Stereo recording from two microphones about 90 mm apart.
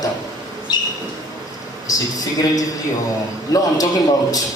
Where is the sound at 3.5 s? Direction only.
40° left (ahead or behind).